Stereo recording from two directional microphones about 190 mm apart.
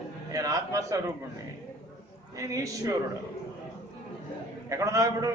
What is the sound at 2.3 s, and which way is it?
Speech, 15° right (ahead or behind).